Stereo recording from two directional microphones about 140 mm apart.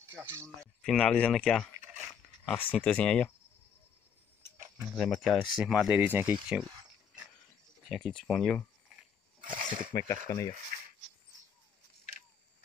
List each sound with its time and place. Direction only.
0.1 s speech: 20° right (ahead or behind)
0.8 s speech: 5° left (ahead or behind)
4.9 s speech: 5° left (ahead or behind); by 6.3 s 10° right (ahead or behind)
6.6 s a sound: 30° right (ahead or behind)
7.9 s speech: 5° left (ahead or behind)
9.4 s speech: 75° right (ahead or behind)
9.9 s speech: 25° left (ahead or behind)
10.7 s a sound: 85° right